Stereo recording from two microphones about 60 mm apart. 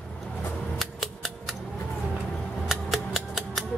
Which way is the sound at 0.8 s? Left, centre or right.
Centre.